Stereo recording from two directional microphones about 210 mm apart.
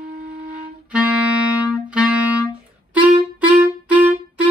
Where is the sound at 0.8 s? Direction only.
5° right (ahead or behind).